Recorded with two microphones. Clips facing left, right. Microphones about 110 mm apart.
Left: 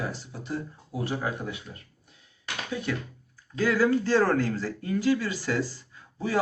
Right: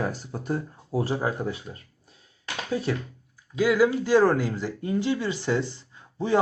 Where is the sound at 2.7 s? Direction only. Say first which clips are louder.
Right 4 dB; 35° right (ahead or behind).